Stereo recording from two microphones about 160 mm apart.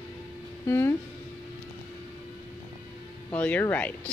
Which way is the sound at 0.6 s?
15° left (ahead or behind).